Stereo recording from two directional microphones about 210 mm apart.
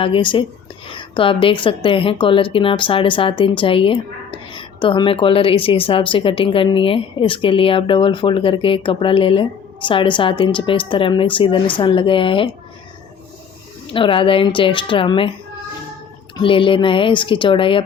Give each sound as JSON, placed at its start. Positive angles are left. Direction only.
{"t": 0.0, "sound": "speech", "side_deg": 25}
{"t": 13.9, "sound": "speech", "side_deg": 25}
{"t": 16.4, "sound": "speech", "side_deg": 25}